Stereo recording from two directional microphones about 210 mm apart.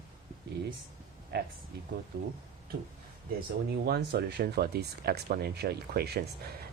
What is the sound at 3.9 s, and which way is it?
Speech, 50° right (ahead or behind).